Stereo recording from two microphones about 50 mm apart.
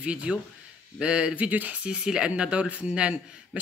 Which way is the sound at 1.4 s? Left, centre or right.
Right.